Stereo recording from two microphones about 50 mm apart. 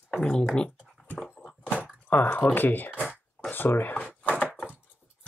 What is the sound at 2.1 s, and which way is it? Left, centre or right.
Speech, left.